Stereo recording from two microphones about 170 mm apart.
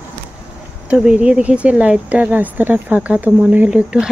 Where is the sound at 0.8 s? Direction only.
5° right (ahead or behind).